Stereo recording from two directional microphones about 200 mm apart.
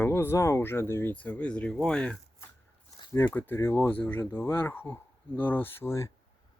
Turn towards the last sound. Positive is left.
turn(degrees=15)  # may be behind; listen again after turning